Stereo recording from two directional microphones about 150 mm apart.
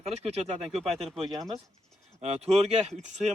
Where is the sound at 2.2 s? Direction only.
45° right (ahead or behind).